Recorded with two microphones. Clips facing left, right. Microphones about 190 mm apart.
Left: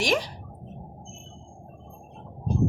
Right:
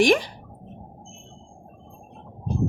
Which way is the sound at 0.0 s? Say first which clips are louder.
Right 7 dB; 55° right (ahead or behind).